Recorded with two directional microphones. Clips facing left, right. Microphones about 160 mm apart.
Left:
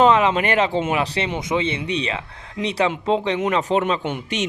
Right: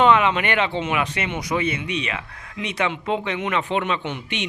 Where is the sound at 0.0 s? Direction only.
35° left (ahead or behind).